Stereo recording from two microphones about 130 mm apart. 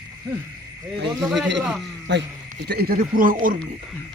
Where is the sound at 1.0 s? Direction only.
Centre (ahead or behind).